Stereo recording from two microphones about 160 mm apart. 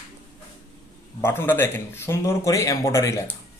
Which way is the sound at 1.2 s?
15° left (ahead or behind).